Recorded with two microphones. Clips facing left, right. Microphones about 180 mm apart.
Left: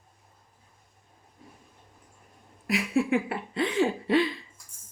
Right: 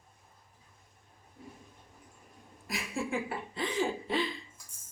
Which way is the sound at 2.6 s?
65° left (ahead or behind).